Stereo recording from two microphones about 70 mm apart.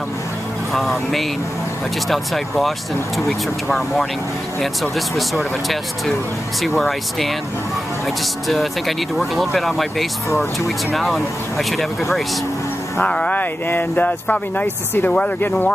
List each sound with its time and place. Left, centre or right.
0.7 s speech: centre
3.7 s speech: centre
8.5 s speech: centre
13.0 s speech: centre